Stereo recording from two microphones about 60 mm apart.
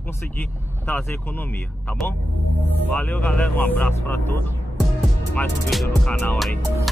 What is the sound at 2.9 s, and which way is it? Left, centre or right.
Speech, left.